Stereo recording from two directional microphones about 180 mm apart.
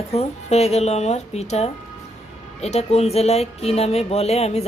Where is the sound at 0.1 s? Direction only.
35° left (ahead or behind).